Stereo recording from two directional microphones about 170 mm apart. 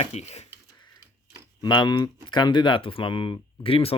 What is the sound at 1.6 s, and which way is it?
Speech, 25° left (ahead or behind).